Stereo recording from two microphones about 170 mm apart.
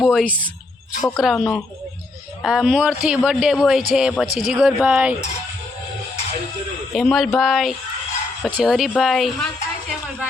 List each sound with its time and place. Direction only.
0.0 s speech: centre (ahead or behind)
6.9 s speech: centre (ahead or behind)